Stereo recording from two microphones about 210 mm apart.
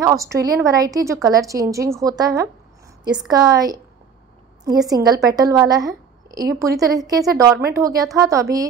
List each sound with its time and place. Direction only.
0.0 s a woman's voice: 15° right (ahead or behind)